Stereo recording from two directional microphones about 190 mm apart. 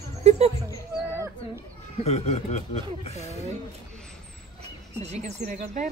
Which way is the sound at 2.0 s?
35° left (ahead or behind).